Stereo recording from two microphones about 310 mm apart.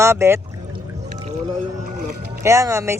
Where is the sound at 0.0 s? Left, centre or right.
Centre.